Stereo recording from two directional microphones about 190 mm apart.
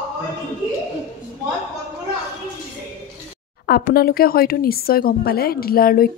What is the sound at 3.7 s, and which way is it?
Speech, 55° left (ahead or behind).